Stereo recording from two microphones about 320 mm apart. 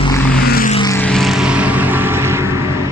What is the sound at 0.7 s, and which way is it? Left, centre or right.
Vehicle, centre.